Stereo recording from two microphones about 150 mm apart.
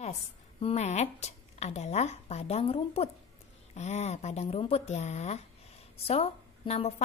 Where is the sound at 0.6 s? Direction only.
45° left (ahead or behind).